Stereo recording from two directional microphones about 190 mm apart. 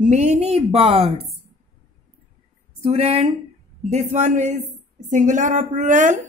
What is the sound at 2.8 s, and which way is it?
A woman's voice, 35° right (ahead or behind).